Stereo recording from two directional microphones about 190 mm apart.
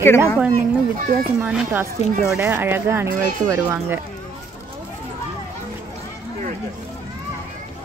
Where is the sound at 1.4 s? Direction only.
10° right (ahead or behind).